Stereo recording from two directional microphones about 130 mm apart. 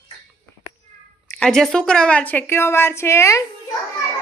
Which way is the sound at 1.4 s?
5° left (ahead or behind).